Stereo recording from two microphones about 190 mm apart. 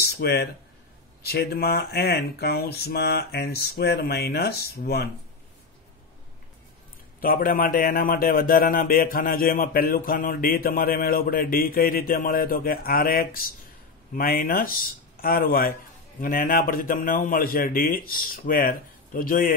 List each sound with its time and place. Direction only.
0.0 s speech: 55° left (ahead or behind)
7.2 s a man's voice: 50° left (ahead or behind)